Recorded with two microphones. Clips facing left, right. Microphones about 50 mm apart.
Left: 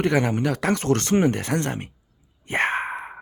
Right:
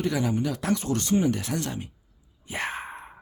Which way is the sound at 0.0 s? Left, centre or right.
Left.